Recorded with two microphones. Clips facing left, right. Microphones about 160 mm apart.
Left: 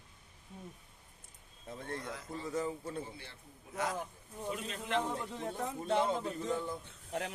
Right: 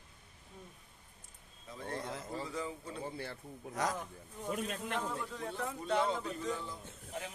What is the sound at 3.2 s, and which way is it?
Speech, 45° right (ahead or behind).